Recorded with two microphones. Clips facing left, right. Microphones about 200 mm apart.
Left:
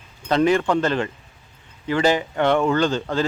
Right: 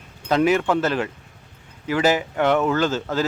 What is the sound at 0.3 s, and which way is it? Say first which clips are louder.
Speech: even; 5° right (ahead or behind).